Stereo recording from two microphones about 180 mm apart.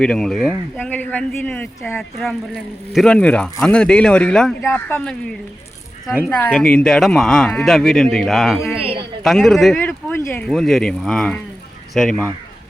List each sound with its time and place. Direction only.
0.0 s speech: 5° left (ahead or behind)
8.8 s a man's voice: 30° right (ahead or behind)
9.2 s speech: centre (ahead or behind)